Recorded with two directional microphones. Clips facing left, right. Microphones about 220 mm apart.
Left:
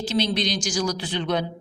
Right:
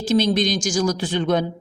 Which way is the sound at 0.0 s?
45° right (ahead or behind).